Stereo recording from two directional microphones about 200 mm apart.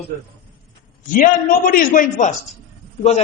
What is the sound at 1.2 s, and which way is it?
A man's voice, 45° left (ahead or behind).